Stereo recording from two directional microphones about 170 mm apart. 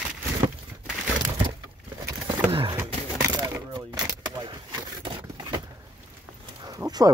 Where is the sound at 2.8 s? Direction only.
15° right (ahead or behind).